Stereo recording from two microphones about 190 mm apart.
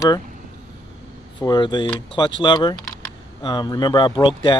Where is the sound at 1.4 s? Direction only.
20° left (ahead or behind).